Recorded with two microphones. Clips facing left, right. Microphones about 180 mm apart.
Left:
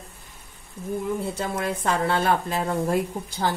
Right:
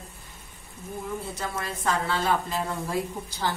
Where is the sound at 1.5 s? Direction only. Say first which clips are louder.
Left 2 dB; 60° left (ahead or behind).